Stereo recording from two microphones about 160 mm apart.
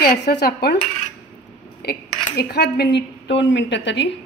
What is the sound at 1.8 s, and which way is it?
Speech, 90° left.